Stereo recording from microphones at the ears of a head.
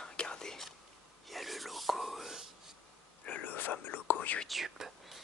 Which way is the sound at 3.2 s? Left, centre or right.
Left.